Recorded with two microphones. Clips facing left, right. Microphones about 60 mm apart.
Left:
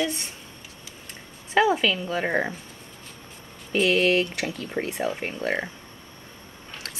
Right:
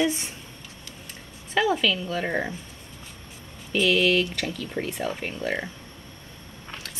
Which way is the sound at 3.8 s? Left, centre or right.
Left.